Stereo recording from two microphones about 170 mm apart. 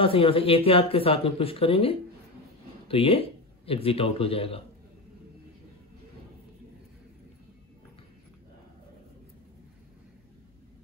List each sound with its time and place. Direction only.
0.0 s speech: 30° left (ahead or behind)